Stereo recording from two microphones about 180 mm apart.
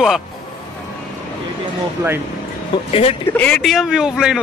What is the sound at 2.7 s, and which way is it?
Speech, 30° left (ahead or behind).